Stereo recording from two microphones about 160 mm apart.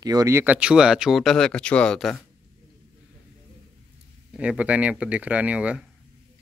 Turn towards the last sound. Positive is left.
turn(degrees=-10)  # may be behind; listen again after turning